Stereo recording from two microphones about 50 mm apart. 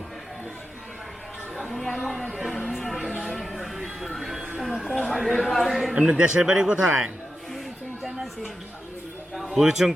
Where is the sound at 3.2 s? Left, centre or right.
Centre.